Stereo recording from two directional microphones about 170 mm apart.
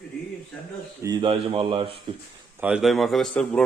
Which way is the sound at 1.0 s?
25° right (ahead or behind).